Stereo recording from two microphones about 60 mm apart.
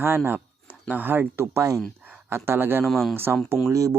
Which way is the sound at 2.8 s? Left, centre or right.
Centre.